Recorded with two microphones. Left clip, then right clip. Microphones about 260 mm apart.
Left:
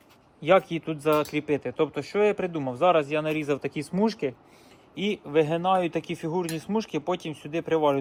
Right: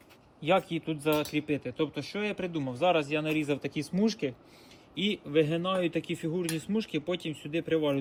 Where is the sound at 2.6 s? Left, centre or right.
Left.